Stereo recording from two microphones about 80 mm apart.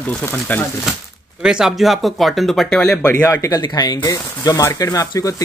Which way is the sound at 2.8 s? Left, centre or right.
Left.